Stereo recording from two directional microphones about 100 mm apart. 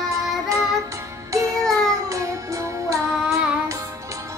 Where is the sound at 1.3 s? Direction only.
30° right (ahead or behind).